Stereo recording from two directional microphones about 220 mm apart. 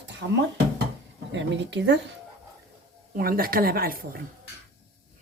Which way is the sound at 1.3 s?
55° right (ahead or behind).